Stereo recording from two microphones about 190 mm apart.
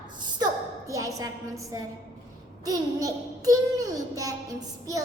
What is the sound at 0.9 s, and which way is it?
A woman's voice, 15° right (ahead or behind).